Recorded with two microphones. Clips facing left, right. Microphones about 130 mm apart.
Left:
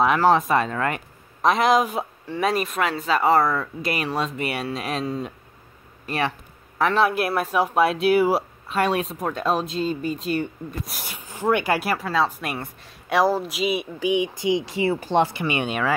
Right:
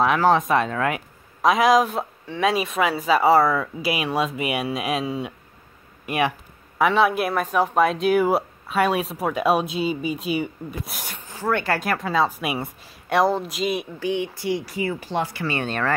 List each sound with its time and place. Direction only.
0.0 s speech: centre (ahead or behind)
6.8 s speech: centre (ahead or behind)
11.1 s speech: 15° left (ahead or behind)
11.9 s speech: centre (ahead or behind)
13.9 s speech: 15° left (ahead or behind)